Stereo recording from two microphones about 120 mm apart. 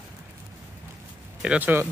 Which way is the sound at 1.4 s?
10° right (ahead or behind).